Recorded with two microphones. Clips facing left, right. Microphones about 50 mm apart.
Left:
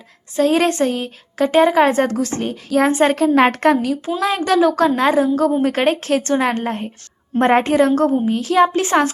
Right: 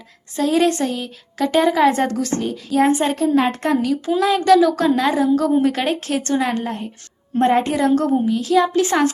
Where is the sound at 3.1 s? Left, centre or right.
Left.